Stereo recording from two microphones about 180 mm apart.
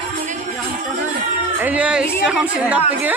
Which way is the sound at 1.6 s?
10° right (ahead or behind).